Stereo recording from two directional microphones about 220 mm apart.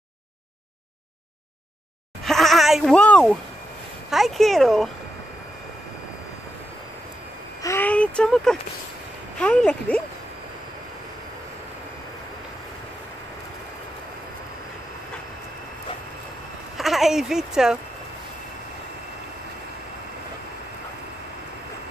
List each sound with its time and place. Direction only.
2.2 s speech: centre (ahead or behind)
7.6 s speech: 10° left (ahead or behind)
16.7 s speech: centre (ahead or behind)